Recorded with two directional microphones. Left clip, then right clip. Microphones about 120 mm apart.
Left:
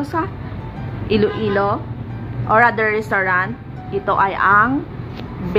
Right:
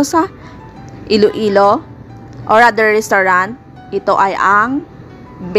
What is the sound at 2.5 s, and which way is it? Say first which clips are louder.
Speech: right 5 dB; 80° right.